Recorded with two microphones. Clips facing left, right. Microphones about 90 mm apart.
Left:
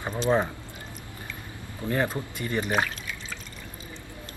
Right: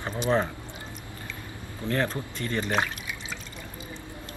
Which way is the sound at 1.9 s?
15° left (ahead or behind).